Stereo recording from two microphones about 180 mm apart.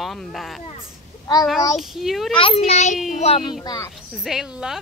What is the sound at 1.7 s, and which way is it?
Speech, centre (ahead or behind).